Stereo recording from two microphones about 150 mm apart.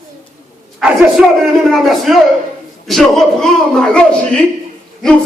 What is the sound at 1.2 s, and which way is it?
A man's voice, 10° right (ahead or behind).